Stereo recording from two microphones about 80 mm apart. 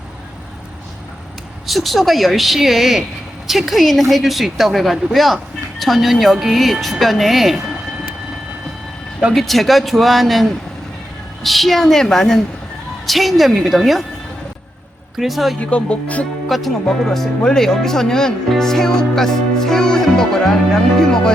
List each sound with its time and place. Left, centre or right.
1.6 s speech: centre
9.3 s speech: centre
15.2 s speech: centre
15.6 s speech: centre
16.5 s speech: centre